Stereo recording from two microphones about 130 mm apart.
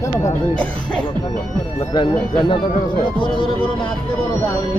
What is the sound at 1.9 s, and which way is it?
Speech, 40° left (ahead or behind).